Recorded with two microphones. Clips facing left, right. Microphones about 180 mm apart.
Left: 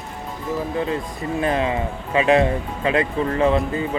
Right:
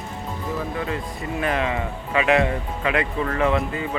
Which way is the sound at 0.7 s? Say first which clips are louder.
Left 4 dB; 25° left (ahead or behind).